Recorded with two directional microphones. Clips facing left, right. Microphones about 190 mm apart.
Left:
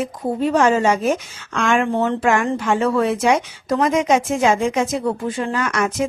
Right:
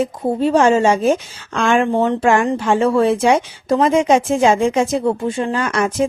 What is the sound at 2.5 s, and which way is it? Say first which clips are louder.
Speech: right 3 dB; 30° right (ahead or behind).